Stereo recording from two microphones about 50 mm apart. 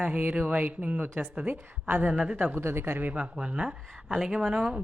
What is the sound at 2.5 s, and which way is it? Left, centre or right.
Speech, right.